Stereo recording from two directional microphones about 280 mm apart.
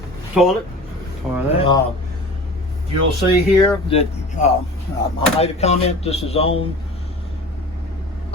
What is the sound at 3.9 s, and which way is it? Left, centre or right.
Speech, left.